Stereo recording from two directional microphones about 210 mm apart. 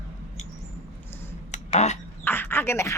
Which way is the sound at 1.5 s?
35° left (ahead or behind).